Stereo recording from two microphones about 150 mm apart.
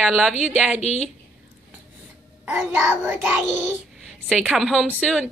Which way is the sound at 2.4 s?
10° right (ahead or behind).